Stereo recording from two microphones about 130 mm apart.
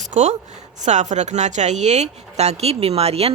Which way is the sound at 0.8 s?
65° right (ahead or behind).